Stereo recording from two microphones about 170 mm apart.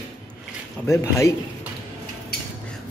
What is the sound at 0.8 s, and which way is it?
Speech, 15° left (ahead or behind).